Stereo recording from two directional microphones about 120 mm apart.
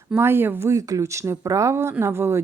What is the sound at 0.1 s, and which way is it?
A woman's voice, 20° right (ahead or behind).